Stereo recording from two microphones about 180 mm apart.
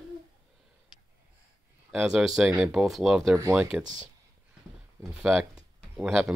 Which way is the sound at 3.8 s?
45° right (ahead or behind).